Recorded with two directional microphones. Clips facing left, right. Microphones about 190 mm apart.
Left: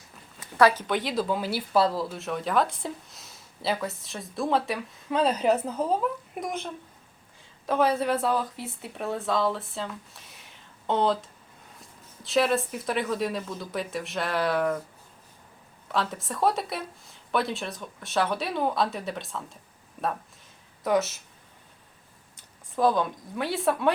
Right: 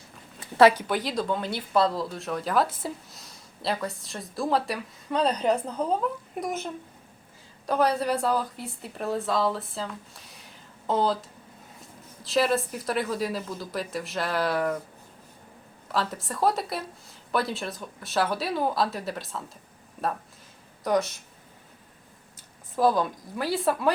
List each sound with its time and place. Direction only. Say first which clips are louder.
0.3 s a sound: right 3 dB; 25° right (ahead or behind)
0.8 s speech: left 1 dB; centre (ahead or behind)
7.7 s speech: even; centre (ahead or behind)
15.9 s speech: even; centre (ahead or behind)
20.8 s speech: even; 5° left (ahead or behind)
22.7 s speech: right 1 dB; 5° right (ahead or behind)